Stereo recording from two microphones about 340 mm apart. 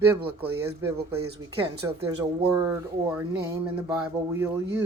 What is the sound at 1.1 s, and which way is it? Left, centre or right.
Speech, right.